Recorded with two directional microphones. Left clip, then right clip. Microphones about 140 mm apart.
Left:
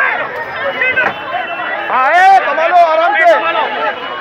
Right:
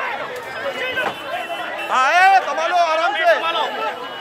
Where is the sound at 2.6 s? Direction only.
10° left (ahead or behind).